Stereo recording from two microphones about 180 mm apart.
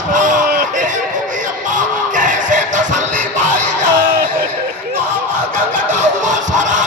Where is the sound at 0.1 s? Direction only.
45° right (ahead or behind).